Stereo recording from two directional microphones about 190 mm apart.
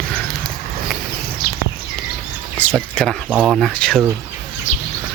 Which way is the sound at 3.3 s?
5° right (ahead or behind).